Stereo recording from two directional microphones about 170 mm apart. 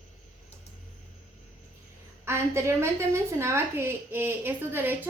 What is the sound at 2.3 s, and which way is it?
A woman's voice, 15° right (ahead or behind).